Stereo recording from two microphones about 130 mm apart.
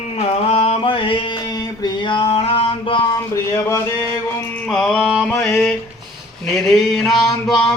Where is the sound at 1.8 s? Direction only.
40° left (ahead or behind).